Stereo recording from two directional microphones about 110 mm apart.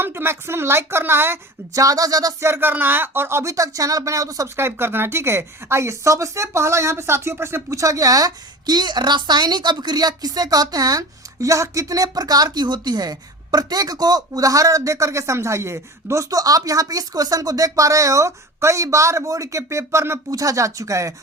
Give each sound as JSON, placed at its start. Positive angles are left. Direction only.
{"t": 0.0, "sound": "a woman's voice", "side_deg": -20}